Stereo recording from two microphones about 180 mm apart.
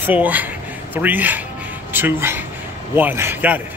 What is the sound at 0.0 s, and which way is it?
A woman's voice, 10° right (ahead or behind).